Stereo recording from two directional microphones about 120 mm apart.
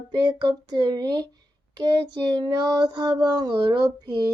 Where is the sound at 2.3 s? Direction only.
35° right (ahead or behind).